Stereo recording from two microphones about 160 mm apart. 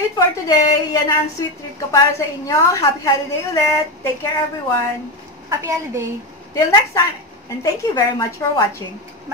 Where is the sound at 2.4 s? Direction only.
20° left (ahead or behind).